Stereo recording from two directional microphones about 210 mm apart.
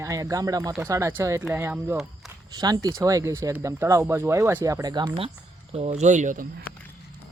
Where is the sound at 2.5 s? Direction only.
20° right (ahead or behind); by 6.4 s 35° right (ahead or behind).